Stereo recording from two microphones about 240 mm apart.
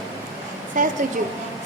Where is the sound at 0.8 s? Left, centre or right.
Right.